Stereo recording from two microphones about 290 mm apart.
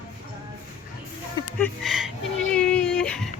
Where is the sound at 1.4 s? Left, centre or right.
Centre.